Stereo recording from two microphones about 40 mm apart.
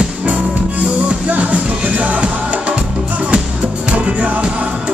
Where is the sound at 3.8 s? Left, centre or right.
Right.